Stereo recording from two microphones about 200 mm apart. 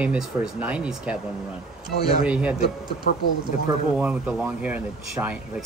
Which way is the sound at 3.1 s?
45° left (ahead or behind).